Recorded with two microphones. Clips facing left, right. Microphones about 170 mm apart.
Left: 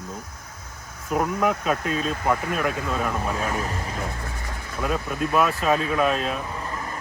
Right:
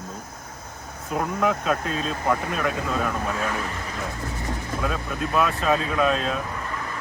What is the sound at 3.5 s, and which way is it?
Speech, 40° left (ahead or behind).